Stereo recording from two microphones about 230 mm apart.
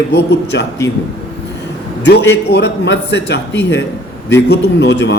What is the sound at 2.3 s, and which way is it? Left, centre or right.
A man's voice, left.